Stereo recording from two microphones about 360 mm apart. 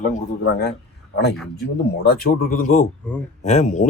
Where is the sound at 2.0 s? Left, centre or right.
Left.